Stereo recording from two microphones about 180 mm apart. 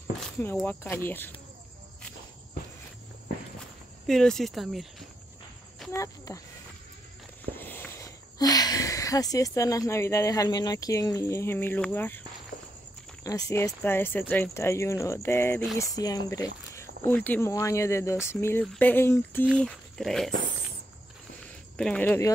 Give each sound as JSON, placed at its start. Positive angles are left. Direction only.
{"t": 0.7, "sound": "speech", "side_deg": 10}
{"t": 4.1, "sound": "speech", "side_deg": 5}
{"t": 5.9, "sound": "speech", "side_deg": 20}
{"t": 7.5, "sound": "speech", "side_deg": 10}
{"t": 19.4, "sound": "speech", "side_deg": 0}
{"t": 21.7, "sound": "speech", "side_deg": 5}